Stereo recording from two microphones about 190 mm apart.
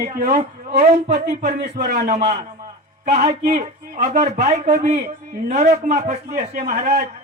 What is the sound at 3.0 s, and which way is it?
A man's voice, 35° right (ahead or behind).